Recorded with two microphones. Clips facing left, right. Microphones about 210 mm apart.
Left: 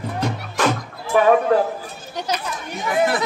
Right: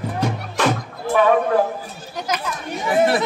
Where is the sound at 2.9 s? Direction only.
25° right (ahead or behind).